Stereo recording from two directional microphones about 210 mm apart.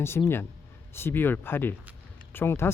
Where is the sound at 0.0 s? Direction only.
10° left (ahead or behind).